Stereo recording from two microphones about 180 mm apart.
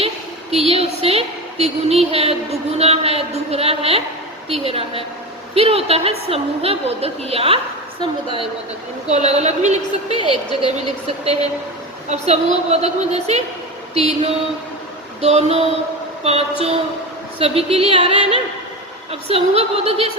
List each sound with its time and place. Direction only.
0.5 s speech: 35° right (ahead or behind)
9.0 s speech: 35° right (ahead or behind)
10.2 s speech: 25° left (ahead or behind)
12.0 s speech: 35° right (ahead or behind)